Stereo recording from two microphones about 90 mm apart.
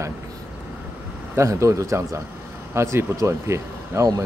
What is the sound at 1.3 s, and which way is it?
Speech, 35° right (ahead or behind).